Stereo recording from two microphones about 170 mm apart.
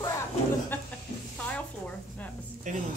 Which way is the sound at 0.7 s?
10° left (ahead or behind).